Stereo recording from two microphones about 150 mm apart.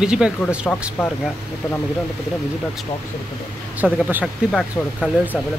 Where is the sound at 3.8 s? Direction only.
10° right (ahead or behind).